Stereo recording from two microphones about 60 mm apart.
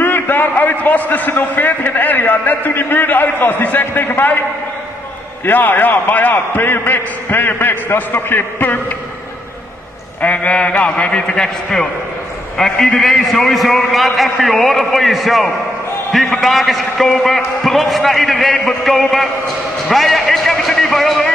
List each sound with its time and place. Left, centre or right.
0.0 s a man's voice: left
10.2 s a man's voice: left; by 19.2 s centre
19.9 s a sound: centre